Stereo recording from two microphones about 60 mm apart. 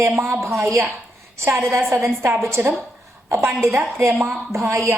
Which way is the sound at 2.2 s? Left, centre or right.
Right.